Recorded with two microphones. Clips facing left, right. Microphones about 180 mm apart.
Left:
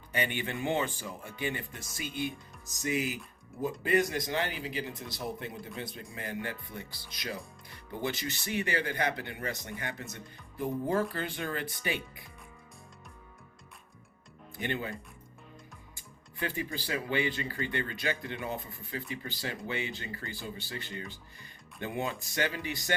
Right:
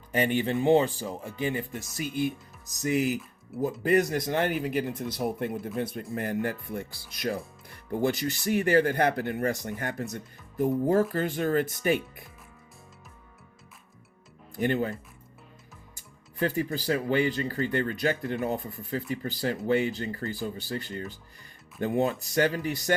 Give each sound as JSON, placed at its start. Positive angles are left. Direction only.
{"t": 0.1, "sound": "speech", "side_deg": -40}
{"t": 2.8, "sound": "speech", "side_deg": -40}
{"t": 3.5, "sound": "speech", "side_deg": -5}
{"t": 3.8, "sound": "speech", "side_deg": -50}
{"t": 14.6, "sound": "speech", "side_deg": -45}
{"t": 16.4, "sound": "speech", "side_deg": -40}